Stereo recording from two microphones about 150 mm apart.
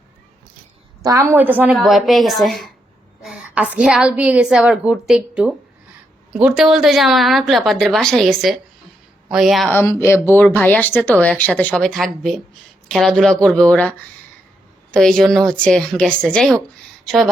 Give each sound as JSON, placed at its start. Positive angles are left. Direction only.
{"t": 1.0, "sound": "a woman's voice", "side_deg": -25}
{"t": 1.4, "sound": "a woman's voice", "side_deg": -10}
{"t": 1.8, "sound": "a woman's voice", "side_deg": 0}
{"t": 9.6, "sound": "a woman's voice", "side_deg": 15}